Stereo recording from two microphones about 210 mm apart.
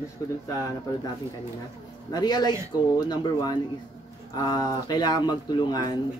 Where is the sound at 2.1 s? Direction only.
20° left (ahead or behind).